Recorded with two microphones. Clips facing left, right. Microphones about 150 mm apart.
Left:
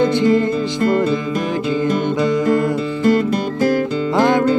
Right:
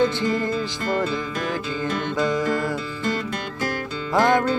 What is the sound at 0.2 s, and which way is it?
Music, 20° left (ahead or behind).